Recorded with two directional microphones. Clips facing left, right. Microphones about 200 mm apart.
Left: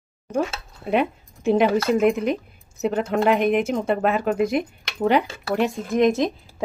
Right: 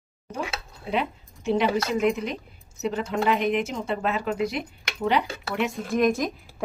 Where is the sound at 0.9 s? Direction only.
55° left (ahead or behind).